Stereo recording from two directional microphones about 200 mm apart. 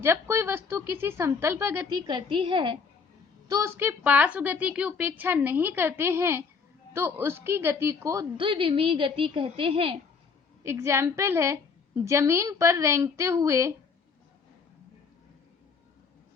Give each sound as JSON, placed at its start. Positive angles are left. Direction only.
{"t": 0.0, "sound": "a woman's voice", "side_deg": -15}
{"t": 3.5, "sound": "a woman's voice", "side_deg": -15}
{"t": 10.6, "sound": "a woman's voice", "side_deg": -15}